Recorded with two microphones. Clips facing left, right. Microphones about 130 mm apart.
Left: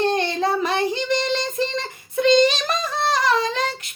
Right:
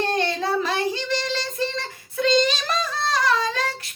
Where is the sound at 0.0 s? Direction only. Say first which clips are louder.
Left 3 dB; 20° left (ahead or behind).